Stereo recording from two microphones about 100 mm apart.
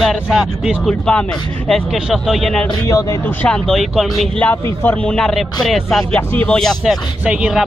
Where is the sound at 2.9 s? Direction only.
35° left (ahead or behind).